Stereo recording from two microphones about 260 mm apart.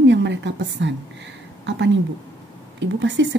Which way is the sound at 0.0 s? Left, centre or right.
Right.